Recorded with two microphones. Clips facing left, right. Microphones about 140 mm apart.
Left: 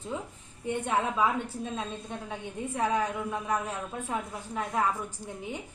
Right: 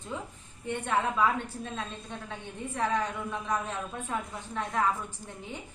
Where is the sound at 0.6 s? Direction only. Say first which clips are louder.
Left 1 dB; 15° left (ahead or behind).